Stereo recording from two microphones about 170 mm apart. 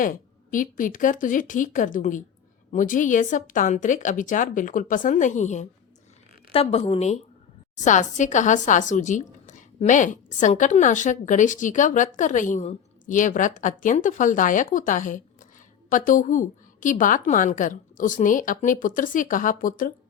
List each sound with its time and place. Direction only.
0.5 s a woman's voice: 50° left (ahead or behind)